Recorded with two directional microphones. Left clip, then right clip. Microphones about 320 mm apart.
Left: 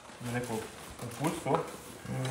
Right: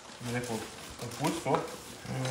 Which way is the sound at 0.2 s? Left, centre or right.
Centre.